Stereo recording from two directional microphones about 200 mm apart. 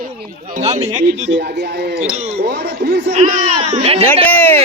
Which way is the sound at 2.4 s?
55° right (ahead or behind).